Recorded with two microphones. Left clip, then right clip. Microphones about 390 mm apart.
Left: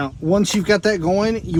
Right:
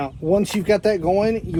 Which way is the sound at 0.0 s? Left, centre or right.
Left.